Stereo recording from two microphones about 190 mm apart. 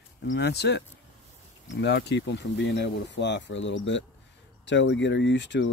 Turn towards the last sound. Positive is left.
turn(degrees=70)  # may be behind; listen again after turning